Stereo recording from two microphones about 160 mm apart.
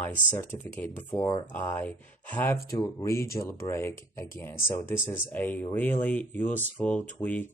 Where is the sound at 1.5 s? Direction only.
10° left (ahead or behind).